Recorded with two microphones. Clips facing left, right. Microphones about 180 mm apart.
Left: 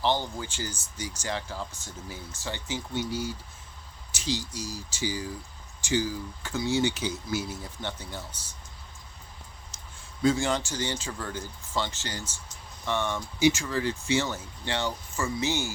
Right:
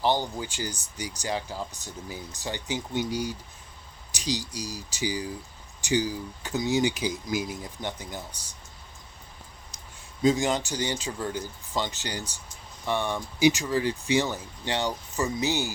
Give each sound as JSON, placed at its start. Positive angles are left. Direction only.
{"t": 0.0, "sound": "speech", "side_deg": -15}
{"t": 10.2, "sound": "speech", "side_deg": -15}